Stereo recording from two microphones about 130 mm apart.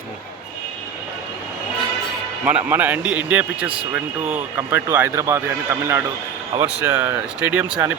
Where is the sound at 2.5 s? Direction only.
10° right (ahead or behind).